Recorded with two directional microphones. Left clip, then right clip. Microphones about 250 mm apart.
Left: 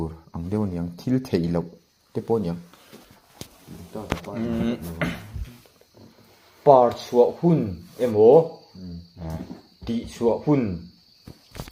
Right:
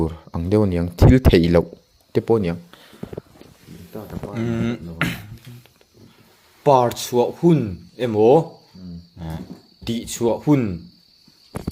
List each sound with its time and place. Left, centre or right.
0.0 s speech: right
3.7 s a sound: centre
4.4 s speech: right
6.6 s speech: right
9.1 s wild animals: right
9.8 s speech: right